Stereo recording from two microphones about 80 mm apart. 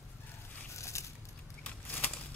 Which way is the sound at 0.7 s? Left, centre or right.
Left.